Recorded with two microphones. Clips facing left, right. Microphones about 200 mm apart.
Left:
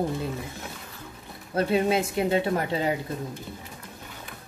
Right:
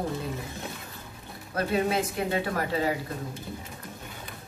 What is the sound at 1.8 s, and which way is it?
A woman's voice, 25° left (ahead or behind).